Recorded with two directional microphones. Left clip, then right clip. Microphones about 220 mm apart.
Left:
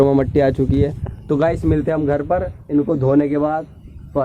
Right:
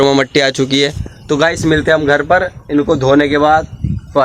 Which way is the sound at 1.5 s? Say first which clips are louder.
Right 7 dB; 5° right (ahead or behind).